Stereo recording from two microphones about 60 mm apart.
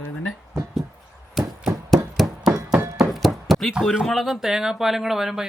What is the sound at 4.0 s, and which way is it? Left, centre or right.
Speech, centre.